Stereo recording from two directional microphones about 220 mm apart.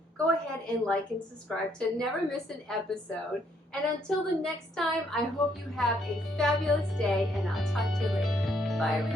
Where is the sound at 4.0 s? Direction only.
Centre (ahead or behind).